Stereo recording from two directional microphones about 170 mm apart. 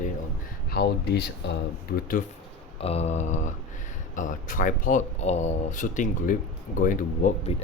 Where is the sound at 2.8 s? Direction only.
40° left (ahead or behind).